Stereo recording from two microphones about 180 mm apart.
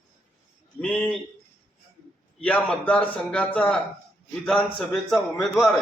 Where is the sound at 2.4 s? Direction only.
5° left (ahead or behind).